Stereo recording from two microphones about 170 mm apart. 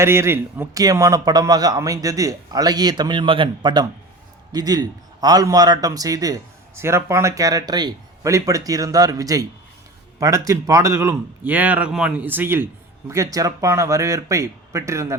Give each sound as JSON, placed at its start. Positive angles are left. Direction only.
{"t": 0.0, "sound": "a man's voice", "side_deg": -15}